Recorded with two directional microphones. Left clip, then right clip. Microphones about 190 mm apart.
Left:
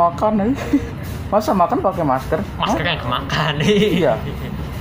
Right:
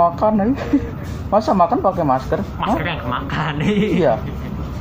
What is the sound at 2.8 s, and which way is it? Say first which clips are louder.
Speech: left 2 dB; 60° left (ahead or behind).